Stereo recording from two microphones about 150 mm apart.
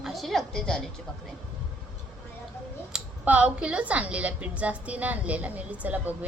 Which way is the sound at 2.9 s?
10° right (ahead or behind).